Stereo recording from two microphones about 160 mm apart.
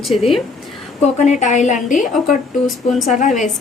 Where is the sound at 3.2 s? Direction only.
50° left (ahead or behind).